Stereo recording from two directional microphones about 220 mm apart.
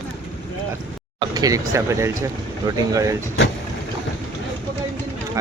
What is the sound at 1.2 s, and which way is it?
Speech, 15° right (ahead or behind).